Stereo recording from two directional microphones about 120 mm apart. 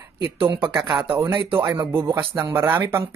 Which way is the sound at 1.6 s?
35° right (ahead or behind).